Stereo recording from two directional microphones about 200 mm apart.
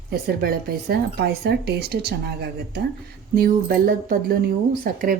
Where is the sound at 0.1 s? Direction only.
50° right (ahead or behind).